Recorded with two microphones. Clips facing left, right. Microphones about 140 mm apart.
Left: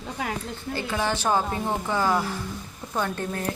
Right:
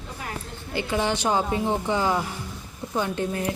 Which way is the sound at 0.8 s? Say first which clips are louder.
Right 3 dB; 20° right (ahead or behind).